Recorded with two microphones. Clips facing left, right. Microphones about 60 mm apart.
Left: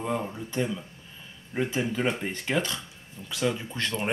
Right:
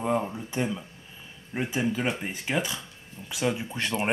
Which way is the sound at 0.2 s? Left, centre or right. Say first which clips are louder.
Even; centre.